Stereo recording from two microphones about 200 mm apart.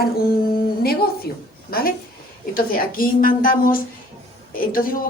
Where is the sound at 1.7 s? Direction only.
50° left (ahead or behind).